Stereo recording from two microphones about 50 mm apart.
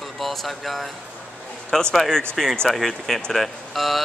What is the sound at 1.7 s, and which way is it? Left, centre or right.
A man's voice, centre.